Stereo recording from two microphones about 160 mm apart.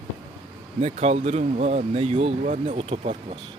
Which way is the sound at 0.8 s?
40° right (ahead or behind).